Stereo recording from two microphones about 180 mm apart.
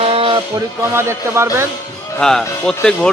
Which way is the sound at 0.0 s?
30° right (ahead or behind).